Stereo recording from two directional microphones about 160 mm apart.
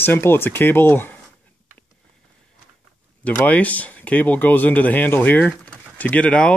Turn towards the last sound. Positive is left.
turn(degrees=5)  # may be behind; listen again after turning